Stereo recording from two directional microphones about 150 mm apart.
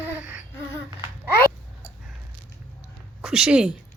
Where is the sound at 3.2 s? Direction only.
5° right (ahead or behind).